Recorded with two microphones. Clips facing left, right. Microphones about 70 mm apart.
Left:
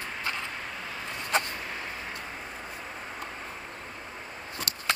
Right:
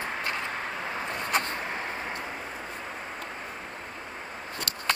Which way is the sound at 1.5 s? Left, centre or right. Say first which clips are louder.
Right 4 dB; right.